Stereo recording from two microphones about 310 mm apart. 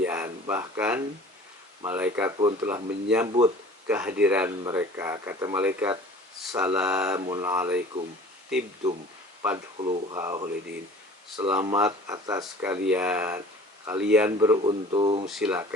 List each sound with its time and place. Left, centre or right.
0.0 s a sound: centre
1.8 s speech: centre
9.7 s speech: centre
15.3 s speech: centre